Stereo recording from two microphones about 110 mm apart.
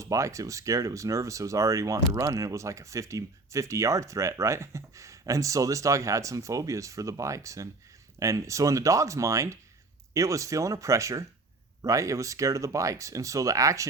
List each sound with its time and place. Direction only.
0.0 s speech: 30° right (ahead or behind)